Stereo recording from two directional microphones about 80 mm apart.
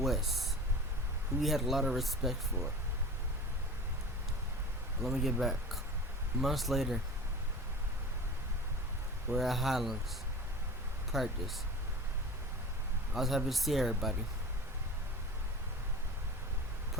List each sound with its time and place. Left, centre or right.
0.0 s speech: centre
5.0 s speech: centre
9.3 s speech: centre
11.1 s speech: centre
13.1 s speech: centre